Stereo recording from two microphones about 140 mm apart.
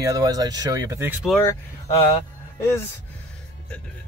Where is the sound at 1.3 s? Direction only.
20° left (ahead or behind).